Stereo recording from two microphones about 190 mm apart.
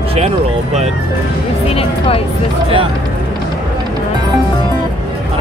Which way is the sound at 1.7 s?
30° left (ahead or behind).